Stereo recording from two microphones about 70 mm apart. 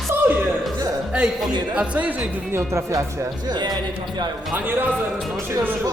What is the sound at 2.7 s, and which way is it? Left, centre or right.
Speech, right.